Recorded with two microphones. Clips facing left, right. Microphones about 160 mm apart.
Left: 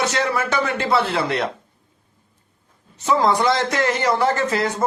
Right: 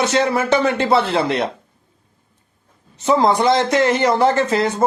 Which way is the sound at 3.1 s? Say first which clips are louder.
Right 3 dB; 20° right (ahead or behind).